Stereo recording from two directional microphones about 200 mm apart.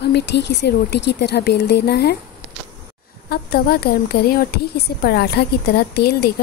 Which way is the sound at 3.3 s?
50° left (ahead or behind).